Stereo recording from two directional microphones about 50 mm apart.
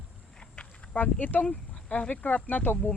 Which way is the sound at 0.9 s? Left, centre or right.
Left.